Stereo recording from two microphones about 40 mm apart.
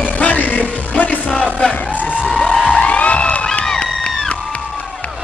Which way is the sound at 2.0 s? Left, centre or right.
Left.